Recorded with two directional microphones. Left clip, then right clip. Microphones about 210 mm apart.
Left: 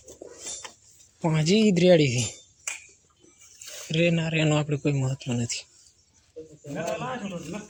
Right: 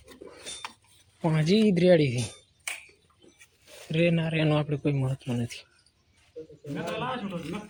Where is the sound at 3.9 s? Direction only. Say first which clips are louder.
Left 2 dB; centre (ahead or behind).